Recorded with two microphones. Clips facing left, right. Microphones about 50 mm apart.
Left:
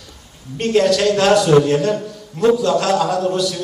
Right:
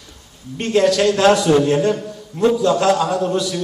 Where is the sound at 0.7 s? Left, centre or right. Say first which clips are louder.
Even; centre.